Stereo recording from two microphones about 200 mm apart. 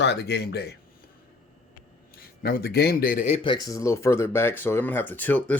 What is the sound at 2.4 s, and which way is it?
Speech, 50° left (ahead or behind).